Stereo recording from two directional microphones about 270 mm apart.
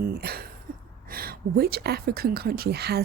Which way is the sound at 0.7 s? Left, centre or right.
Right.